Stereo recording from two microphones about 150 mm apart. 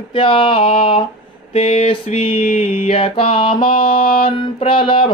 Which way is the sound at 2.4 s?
60° left (ahead or behind).